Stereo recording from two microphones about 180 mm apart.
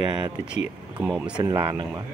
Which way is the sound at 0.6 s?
10° right (ahead or behind).